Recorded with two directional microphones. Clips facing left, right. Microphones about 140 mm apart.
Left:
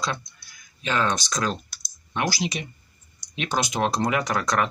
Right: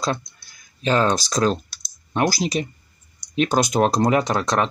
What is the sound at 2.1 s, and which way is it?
Speech, 40° right (ahead or behind).